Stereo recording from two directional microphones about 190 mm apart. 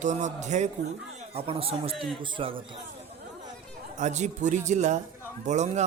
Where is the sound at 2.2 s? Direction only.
25° right (ahead or behind).